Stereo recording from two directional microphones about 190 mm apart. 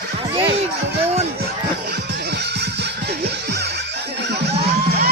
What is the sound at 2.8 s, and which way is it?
Music, 60° right (ahead or behind).